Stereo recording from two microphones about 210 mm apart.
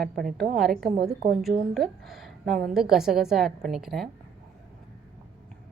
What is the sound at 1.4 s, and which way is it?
A woman's voice, centre (ahead or behind).